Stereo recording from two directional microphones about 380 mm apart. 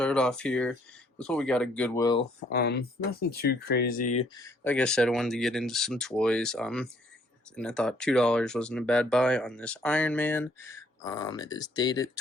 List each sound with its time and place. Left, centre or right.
0.0 s speech: centre
2.5 s speech: left
4.4 s speech: centre